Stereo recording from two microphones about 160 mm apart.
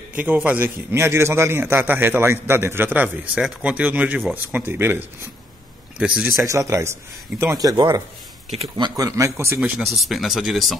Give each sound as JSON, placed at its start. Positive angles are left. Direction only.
{"t": 0.1, "sound": "a man's voice", "side_deg": -10}
{"t": 6.4, "sound": "speech", "side_deg": -20}
{"t": 9.9, "sound": "speech", "side_deg": 0}